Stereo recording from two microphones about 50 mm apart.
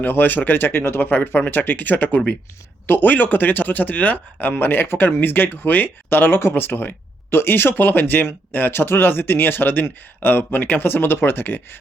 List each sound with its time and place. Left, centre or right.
0.0 s speech: left
2.8 s speech: left
3.1 s speech: left